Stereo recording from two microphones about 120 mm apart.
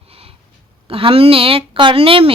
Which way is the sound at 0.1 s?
55° right (ahead or behind).